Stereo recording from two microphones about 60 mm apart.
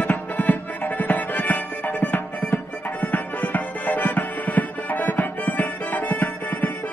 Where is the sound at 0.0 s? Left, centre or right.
Left.